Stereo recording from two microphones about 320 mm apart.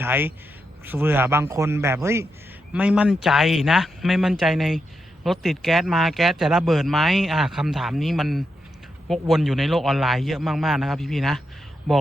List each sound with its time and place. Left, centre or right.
0.0 s speech: centre